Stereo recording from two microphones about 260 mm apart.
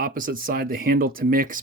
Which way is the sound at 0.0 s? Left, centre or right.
Right.